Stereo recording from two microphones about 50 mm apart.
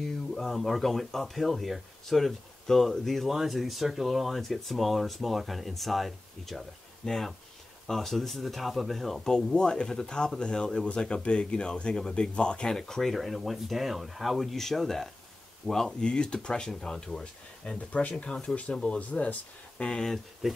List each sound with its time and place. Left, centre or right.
0.3 s speech: centre
7.1 s speech: centre
9.5 s speech: centre
19.8 s speech: centre
20.4 s speech: centre